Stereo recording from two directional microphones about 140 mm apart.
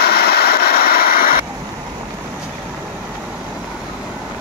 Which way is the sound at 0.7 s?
90° left.